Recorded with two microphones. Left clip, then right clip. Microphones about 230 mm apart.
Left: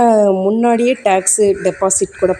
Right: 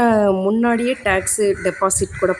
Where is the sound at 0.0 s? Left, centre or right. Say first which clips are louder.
Left 4 dB; centre.